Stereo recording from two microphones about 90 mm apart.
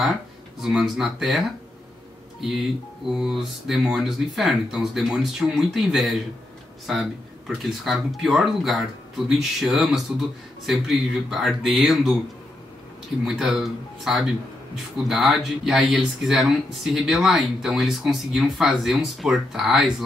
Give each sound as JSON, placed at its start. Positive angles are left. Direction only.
{"t": 0.6, "sound": "speech", "side_deg": -5}
{"t": 3.1, "sound": "speech", "side_deg": -5}
{"t": 13.2, "sound": "speech", "side_deg": -5}